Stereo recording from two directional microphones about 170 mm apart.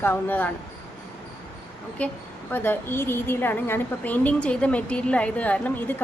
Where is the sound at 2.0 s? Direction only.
10° left (ahead or behind).